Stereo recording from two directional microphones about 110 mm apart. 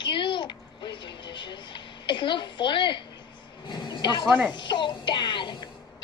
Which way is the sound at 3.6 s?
45° left (ahead or behind).